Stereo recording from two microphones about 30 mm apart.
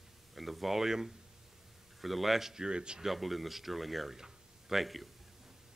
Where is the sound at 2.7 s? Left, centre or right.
Right.